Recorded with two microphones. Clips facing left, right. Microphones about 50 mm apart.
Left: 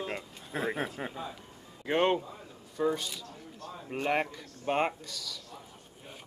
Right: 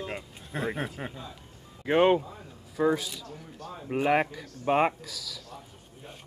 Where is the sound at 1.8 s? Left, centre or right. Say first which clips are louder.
Right 5 dB; centre.